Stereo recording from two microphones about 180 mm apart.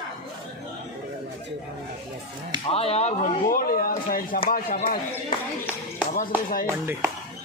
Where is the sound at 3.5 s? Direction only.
55° left (ahead or behind).